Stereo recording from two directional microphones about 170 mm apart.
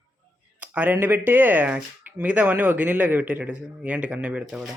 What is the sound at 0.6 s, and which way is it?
Speech, 10° right (ahead or behind).